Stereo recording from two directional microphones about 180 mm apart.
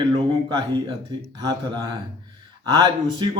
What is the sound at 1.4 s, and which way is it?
A man's voice, 25° right (ahead or behind).